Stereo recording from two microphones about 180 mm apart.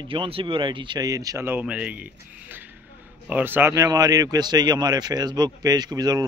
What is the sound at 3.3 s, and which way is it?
Speech, 10° right (ahead or behind).